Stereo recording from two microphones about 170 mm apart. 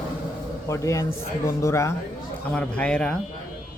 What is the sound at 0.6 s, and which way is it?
Speech, 15° left (ahead or behind).